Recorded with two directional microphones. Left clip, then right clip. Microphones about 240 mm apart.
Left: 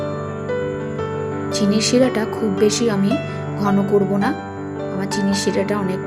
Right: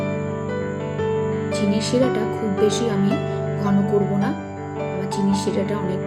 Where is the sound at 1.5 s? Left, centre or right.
Centre.